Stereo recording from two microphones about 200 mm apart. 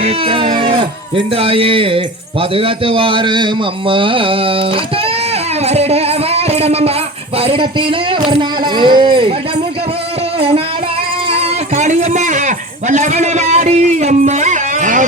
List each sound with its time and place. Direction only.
0.0 s a man's voice: 30° right (ahead or behind)
5.6 s music: 30° right (ahead or behind)
7.3 s a man's voice: 25° right (ahead or behind)
11.3 s a man's voice: 30° right (ahead or behind)